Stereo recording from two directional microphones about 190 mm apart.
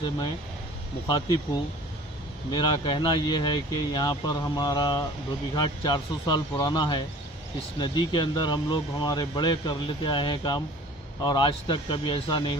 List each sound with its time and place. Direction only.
1.0 s speech: 25° left (ahead or behind)